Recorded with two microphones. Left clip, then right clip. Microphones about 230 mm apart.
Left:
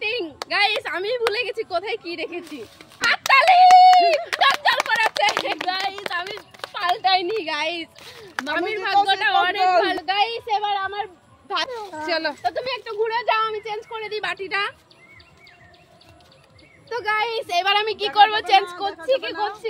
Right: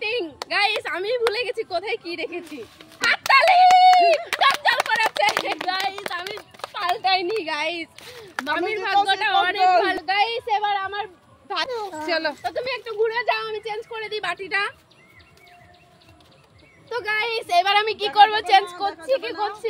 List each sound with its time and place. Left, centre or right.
0.0 s a woman's voice: centre
2.8 s a sound: centre
6.3 s speech: centre
11.7 s speech: right
12.1 s speech: centre
12.4 s speech: centre
16.9 s speech: centre